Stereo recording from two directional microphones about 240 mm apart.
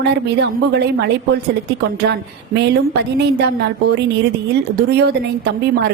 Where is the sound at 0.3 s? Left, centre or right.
Right.